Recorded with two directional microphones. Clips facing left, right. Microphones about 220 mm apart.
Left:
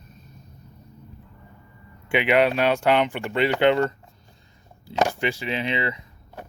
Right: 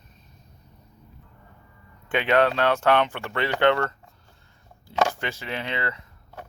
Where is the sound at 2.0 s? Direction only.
10° left (ahead or behind).